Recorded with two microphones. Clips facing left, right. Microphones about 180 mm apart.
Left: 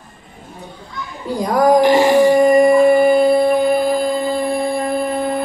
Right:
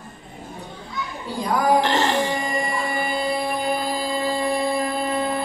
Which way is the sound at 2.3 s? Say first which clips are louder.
Left 16 dB; 55° left (ahead or behind).